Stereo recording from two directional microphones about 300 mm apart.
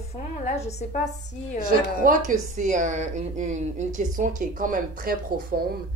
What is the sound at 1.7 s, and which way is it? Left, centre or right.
A woman's voice, right.